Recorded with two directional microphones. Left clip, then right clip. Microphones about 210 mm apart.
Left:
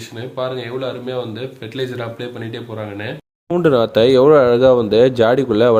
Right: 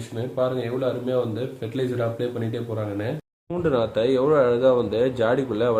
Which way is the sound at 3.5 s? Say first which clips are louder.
Left 9 dB; 40° left (ahead or behind).